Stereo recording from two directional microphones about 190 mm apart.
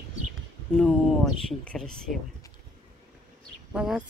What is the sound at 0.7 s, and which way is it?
Speech, 5° left (ahead or behind).